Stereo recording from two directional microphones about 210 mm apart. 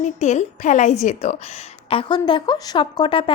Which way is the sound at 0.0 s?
30° left (ahead or behind).